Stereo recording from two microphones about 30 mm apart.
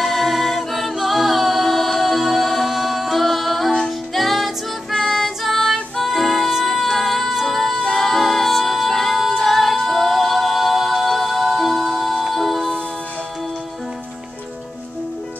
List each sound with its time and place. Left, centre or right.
0.0 s a capella: centre
4.1 s music: centre